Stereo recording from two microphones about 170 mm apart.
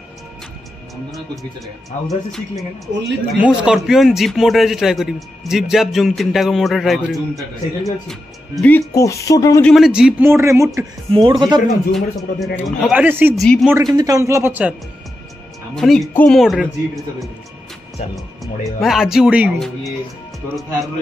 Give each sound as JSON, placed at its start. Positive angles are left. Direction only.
{"t": 2.0, "sound": "a man's voice", "side_deg": 0}
{"t": 2.9, "sound": "a woman's voice", "side_deg": -90}
{"t": 3.3, "sound": "a man's voice", "side_deg": -5}
{"t": 9.6, "sound": "a man's voice", "side_deg": 0}
{"t": 11.1, "sound": "speech", "side_deg": -30}
{"t": 11.7, "sound": "a man's voice", "side_deg": 0}
{"t": 13.0, "sound": "a man's voice", "side_deg": -10}
{"t": 15.7, "sound": "a man's voice", "side_deg": 0}